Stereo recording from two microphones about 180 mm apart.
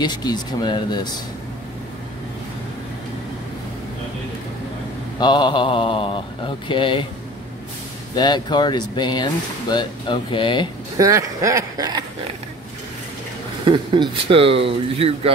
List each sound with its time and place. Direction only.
0.0 s speech: 25° left (ahead or behind)
5.2 s speech: 25° left (ahead or behind)
8.2 s speech: 25° left (ahead or behind)
11.0 s speech: 15° right (ahead or behind)
13.7 s speech: 25° right (ahead or behind)